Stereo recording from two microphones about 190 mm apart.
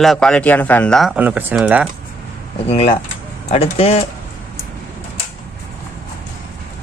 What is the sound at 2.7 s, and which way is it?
Speech, 30° left (ahead or behind).